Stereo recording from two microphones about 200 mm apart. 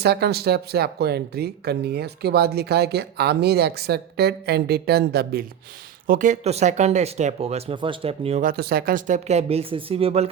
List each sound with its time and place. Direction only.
0.0 s speech: 55° right (ahead or behind)
6.1 s speech: 40° right (ahead or behind)
8.4 s speech: 45° right (ahead or behind); by 10.2 s 30° right (ahead or behind)